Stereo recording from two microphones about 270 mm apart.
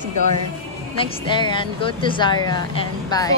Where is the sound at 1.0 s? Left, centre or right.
Centre.